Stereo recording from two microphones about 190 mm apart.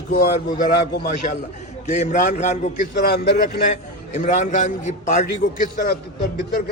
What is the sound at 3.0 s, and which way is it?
Speech, 55° left (ahead or behind).